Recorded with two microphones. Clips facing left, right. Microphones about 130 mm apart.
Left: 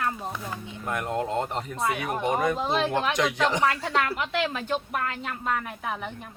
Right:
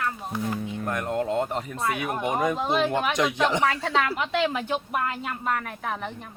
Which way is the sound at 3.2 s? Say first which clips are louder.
Right 1 dB; 15° right (ahead or behind).